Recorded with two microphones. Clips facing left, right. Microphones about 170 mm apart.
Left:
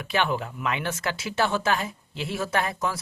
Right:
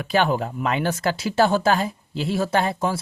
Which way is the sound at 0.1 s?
35° right (ahead or behind).